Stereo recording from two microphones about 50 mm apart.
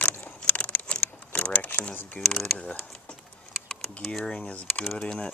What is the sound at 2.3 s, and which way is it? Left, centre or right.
Speech, centre.